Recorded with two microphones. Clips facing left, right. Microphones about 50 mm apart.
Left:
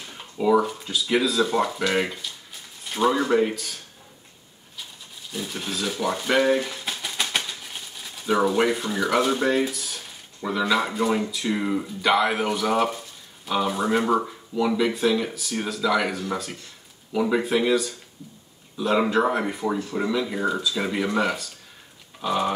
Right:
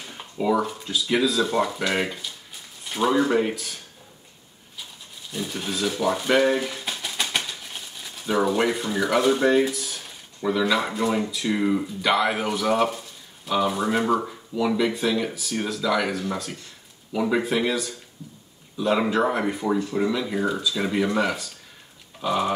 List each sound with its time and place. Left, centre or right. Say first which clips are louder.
0.1 s speech: left 3 dB; centre
5.3 s speech: right 1 dB; centre